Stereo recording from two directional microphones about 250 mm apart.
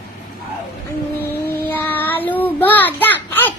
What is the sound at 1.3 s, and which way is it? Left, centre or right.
Child singing, centre.